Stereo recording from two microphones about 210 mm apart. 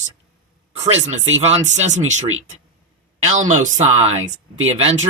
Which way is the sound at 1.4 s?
30° right (ahead or behind).